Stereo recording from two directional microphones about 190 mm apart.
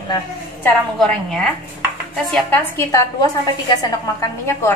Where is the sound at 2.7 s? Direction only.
15° left (ahead or behind).